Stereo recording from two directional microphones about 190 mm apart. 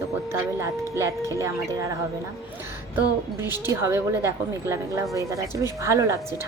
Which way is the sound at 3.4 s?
10° right (ahead or behind).